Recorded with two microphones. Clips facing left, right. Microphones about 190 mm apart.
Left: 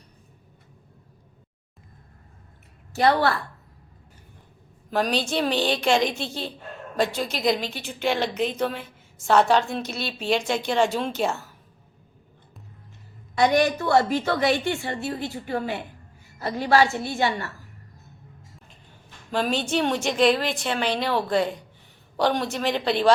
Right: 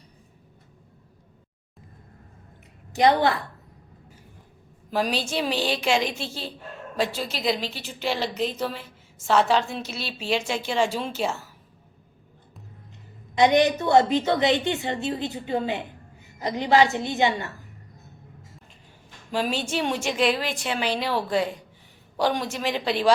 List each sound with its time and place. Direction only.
2.9 s a woman's voice: 15° right (ahead or behind)
4.9 s a woman's voice: 10° right (ahead or behind)
13.3 s a woman's voice: 20° right (ahead or behind)
19.3 s a woman's voice: 10° right (ahead or behind)